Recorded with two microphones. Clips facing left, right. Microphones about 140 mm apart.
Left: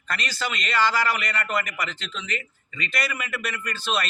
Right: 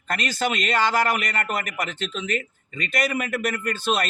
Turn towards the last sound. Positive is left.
turn(degrees=-50)  # may be behind; listen again after turning